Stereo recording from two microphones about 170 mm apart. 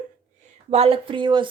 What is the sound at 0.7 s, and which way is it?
Speech, 35° right (ahead or behind).